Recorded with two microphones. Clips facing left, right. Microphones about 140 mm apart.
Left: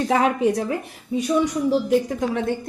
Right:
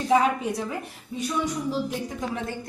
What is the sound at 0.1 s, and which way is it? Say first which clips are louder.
Speech: left 1 dB; 80° left.